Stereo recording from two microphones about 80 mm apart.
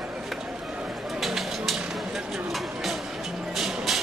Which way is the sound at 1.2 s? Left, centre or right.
Centre.